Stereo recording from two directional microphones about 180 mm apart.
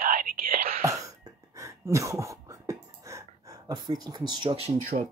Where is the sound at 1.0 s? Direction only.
20° right (ahead or behind).